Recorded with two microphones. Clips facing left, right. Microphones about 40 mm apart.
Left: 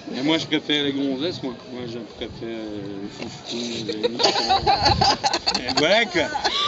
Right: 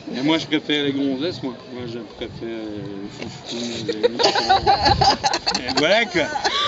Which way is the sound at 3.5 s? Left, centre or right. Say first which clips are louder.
Right 2 dB; centre.